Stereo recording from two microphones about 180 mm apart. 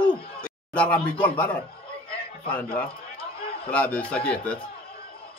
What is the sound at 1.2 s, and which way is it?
Speech, 10° left (ahead or behind).